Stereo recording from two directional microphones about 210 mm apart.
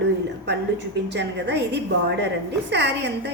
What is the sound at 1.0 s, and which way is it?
A woman's voice, 55° right (ahead or behind).